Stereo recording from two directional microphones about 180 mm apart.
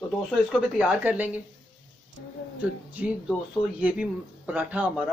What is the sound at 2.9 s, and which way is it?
Speech, 10° right (ahead or behind).